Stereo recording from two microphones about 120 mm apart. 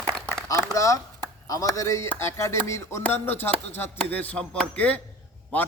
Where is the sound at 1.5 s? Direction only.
30° left (ahead or behind).